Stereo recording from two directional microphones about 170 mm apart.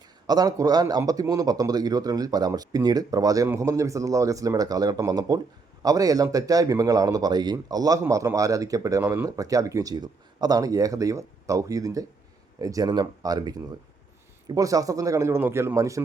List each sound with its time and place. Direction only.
0.3 s speech: 20° right (ahead or behind)